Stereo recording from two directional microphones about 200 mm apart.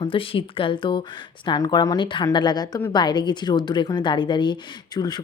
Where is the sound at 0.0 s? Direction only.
25° left (ahead or behind).